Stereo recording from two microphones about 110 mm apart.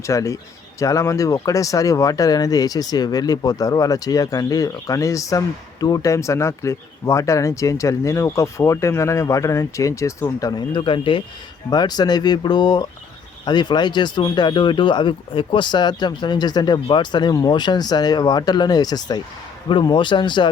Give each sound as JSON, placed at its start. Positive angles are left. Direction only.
{"t": 0.0, "sound": "speech", "side_deg": 30}
{"t": 11.7, "sound": "speech", "side_deg": 40}